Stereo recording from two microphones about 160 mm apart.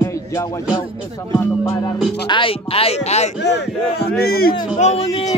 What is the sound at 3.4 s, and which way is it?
Speech, 90° left.